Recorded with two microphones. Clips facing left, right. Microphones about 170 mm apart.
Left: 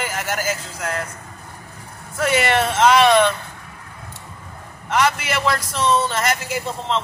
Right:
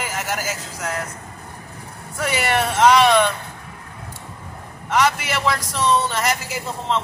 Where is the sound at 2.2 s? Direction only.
15° right (ahead or behind).